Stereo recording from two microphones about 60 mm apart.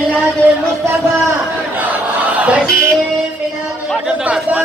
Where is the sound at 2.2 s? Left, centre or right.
Right.